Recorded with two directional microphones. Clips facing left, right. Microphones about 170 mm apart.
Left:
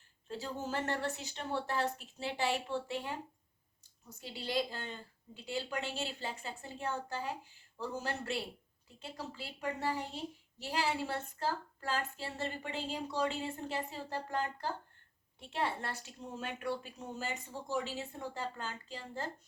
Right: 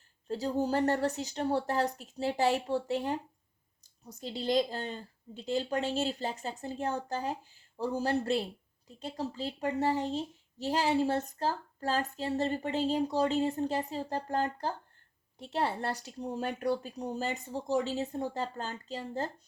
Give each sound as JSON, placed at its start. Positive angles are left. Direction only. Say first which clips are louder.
{"t": 0.3, "sound": "a woman's voice", "louder": "right 9 dB", "side_deg": -35}
{"t": 9.9, "sound": "speech", "louder": "right 8 dB", "side_deg": -20}
{"t": 10.6, "sound": "a woman's voice", "louder": "right 7 dB", "side_deg": -40}